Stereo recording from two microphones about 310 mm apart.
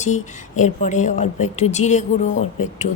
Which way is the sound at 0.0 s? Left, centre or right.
Left.